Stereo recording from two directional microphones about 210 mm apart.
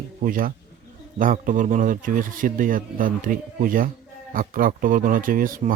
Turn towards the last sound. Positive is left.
turn(degrees=-40)  # may be behind; listen again after turning